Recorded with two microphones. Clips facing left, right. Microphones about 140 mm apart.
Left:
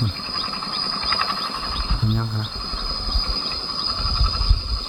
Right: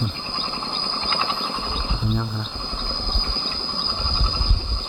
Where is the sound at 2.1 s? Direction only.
5° left (ahead or behind).